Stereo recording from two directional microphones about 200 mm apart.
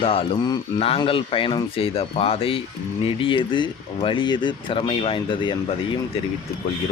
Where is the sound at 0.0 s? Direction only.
25° left (ahead or behind).